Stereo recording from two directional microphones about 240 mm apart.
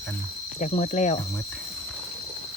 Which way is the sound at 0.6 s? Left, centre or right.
Left.